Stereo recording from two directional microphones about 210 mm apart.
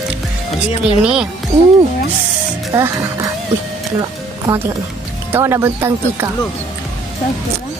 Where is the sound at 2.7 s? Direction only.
15° right (ahead or behind).